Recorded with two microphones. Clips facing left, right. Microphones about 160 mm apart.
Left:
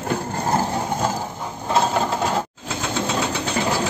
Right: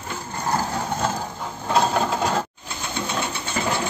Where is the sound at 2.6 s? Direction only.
90° left.